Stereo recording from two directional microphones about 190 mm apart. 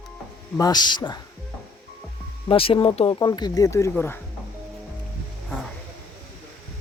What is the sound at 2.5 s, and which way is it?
Speech, 30° left (ahead or behind).